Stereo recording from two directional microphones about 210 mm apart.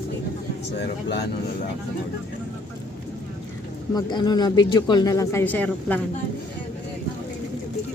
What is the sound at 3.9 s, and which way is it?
Speech, 20° left (ahead or behind).